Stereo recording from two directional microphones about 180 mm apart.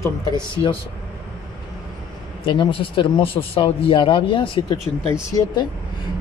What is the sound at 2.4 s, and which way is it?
Speech, 25° left (ahead or behind).